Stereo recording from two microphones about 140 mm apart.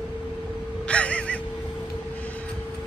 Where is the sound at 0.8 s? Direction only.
10° left (ahead or behind).